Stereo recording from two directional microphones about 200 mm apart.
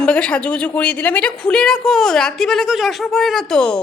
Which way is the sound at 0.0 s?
5° left (ahead or behind).